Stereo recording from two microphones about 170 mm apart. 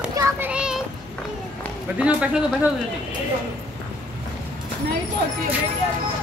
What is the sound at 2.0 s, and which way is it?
Speech, 5° right (ahead or behind).